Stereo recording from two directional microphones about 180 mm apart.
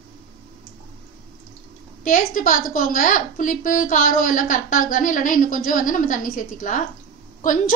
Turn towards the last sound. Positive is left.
turn(degrees=45)  # may be behind; listen again after turning